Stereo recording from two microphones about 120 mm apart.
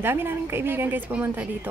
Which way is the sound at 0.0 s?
20° right (ahead or behind).